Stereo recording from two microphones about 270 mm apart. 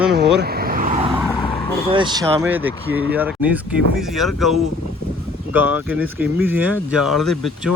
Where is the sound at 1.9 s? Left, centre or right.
Centre.